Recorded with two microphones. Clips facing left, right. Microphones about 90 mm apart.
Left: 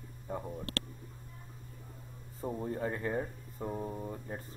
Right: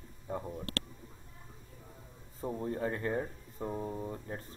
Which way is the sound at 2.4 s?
Centre (ahead or behind).